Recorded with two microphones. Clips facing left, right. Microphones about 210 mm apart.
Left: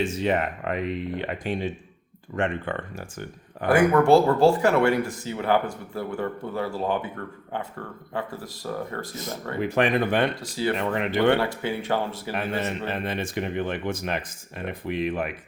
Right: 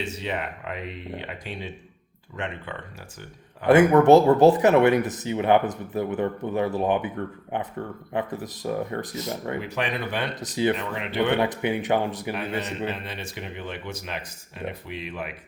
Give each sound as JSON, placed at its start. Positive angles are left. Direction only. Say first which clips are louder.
{"t": 0.0, "sound": "speech", "louder": "left 6 dB", "side_deg": 50}
{"t": 3.7, "sound": "speech", "louder": "right 3 dB", "side_deg": -20}
{"t": 9.6, "sound": "speech", "louder": "left 6 dB", "side_deg": 50}
{"t": 10.4, "sound": "speech", "louder": "right 3 dB", "side_deg": -20}
{"t": 10.8, "sound": "speech", "louder": "left 5 dB", "side_deg": 45}
{"t": 11.3, "sound": "speech", "louder": "right 2 dB", "side_deg": -20}
{"t": 12.9, "sound": "speech", "louder": "left 5 dB", "side_deg": 50}